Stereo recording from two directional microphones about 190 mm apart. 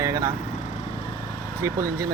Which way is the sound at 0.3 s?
40° left (ahead or behind).